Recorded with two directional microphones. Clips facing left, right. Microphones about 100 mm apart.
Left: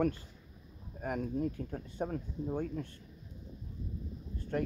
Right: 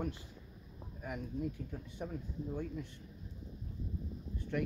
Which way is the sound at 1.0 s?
50° left (ahead or behind).